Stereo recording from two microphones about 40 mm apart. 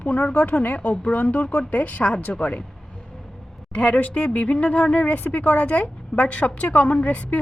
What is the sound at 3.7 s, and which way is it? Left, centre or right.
A woman's voice, left.